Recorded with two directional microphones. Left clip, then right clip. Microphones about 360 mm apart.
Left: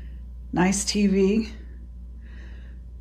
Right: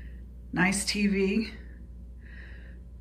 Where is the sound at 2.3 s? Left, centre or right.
Centre.